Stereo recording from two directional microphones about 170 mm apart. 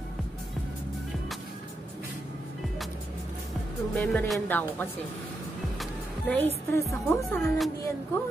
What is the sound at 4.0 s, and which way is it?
Speech, centre (ahead or behind).